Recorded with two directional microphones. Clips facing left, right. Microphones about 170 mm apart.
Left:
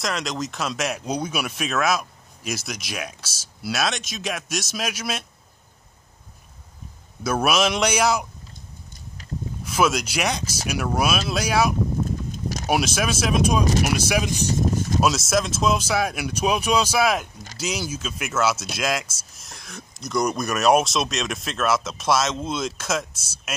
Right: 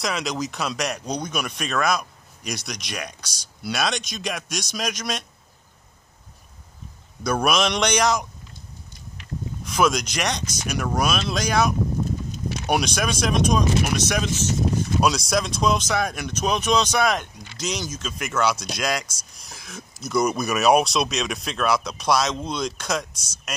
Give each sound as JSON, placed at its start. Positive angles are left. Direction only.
{"t": 0.0, "sound": "speech", "side_deg": 0}
{"t": 7.2, "sound": "speech", "side_deg": 5}
{"t": 9.7, "sound": "speech", "side_deg": 5}
{"t": 12.3, "sound": "a sound", "side_deg": 45}
{"t": 12.6, "sound": "speech", "side_deg": 5}